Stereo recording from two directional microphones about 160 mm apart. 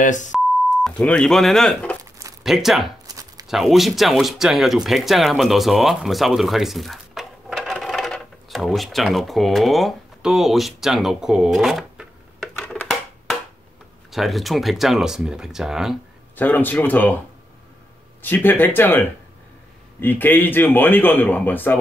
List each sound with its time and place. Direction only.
0.0 s speech: 50° left (ahead or behind)
0.8 s speech: 5° left (ahead or behind)
3.1 s a sound: 25° right (ahead or behind)
3.4 s speech: centre (ahead or behind)
14.1 s speech: centre (ahead or behind)
16.3 s a man's voice: 10° left (ahead or behind)
18.2 s a man's voice: 10° left (ahead or behind)